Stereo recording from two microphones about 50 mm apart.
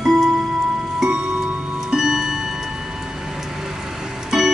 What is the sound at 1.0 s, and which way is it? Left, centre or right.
Music, right.